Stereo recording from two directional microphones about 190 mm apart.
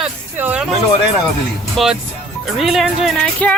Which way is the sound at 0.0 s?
10° right (ahead or behind).